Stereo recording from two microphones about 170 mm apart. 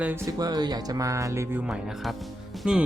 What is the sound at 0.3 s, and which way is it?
Speech, 20° right (ahead or behind).